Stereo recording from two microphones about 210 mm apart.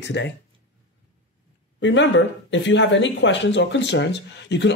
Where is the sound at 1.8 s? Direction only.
60° left (ahead or behind).